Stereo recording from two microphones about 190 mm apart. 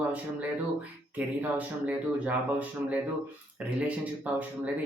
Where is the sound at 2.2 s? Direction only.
10° right (ahead or behind).